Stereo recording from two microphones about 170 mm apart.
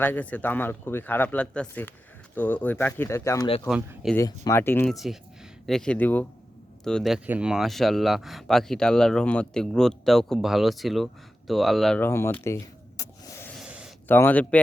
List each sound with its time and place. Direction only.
0.0 s speech: 10° left (ahead or behind)
3.7 s speech: 5° right (ahead or behind)
4.4 s speech: 15° left (ahead or behind)
4.9 s speech: centre (ahead or behind)
11.9 s speech: 15° left (ahead or behind)
13.0 s a sound: 15° left (ahead or behind)
13.5 s a sound: 5° right (ahead or behind)
14.1 s speech: 10° left (ahead or behind)